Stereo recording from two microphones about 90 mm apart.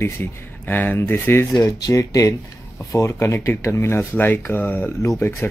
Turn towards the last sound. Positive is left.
turn(degrees=25)  # may be behind; listen again after turning